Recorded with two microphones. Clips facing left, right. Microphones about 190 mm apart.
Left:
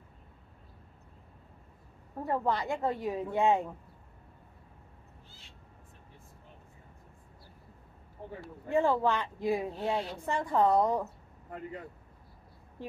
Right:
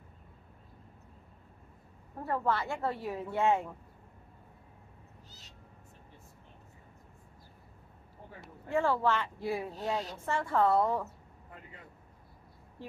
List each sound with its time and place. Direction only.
2.2 s speech: 15° left (ahead or behind)
8.6 s speech: 15° left (ahead or behind)